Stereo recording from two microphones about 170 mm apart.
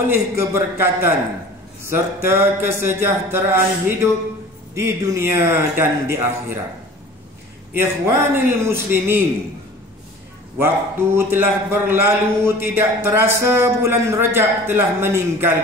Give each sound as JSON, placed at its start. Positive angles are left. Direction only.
{"t": 0.1, "sound": "a man's voice", "side_deg": -15}
{"t": 7.8, "sound": "a man's voice", "side_deg": -15}
{"t": 11.1, "sound": "a man's voice", "side_deg": -15}